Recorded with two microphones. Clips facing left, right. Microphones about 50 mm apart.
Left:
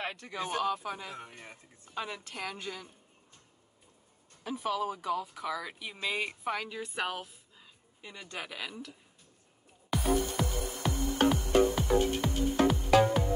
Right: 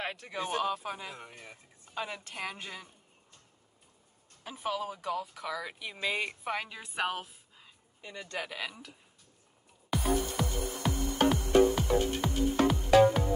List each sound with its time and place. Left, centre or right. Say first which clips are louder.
0.0 s a sound: even; centre
0.3 s speech: even; centre
1.1 s speech: left 2 dB; left
2.3 s speech: even; right
4.5 s speech: left 2 dB; centre
4.8 s speech: left 2 dB; centre
6.5 s speech: even; right
7.0 s a sound: right 3 dB; centre
8.0 s speech: right 3 dB; centre
8.5 s speech: right 1 dB; centre
9.8 s music: left 1 dB; centre